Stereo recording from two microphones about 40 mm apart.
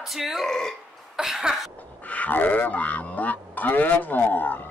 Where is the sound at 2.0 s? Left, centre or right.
Left.